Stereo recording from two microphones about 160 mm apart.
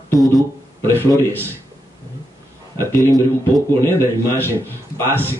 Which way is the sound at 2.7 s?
20° left (ahead or behind).